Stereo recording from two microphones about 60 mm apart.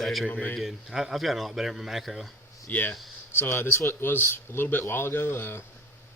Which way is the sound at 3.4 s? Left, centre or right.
Left.